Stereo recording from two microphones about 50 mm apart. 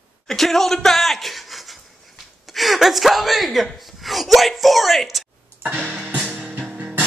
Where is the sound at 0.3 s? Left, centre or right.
Centre.